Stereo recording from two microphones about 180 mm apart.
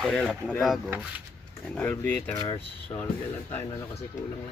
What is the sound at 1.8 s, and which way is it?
Speech, 10° left (ahead or behind).